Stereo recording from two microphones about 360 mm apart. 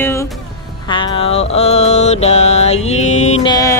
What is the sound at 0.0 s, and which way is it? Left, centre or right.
Music, centre.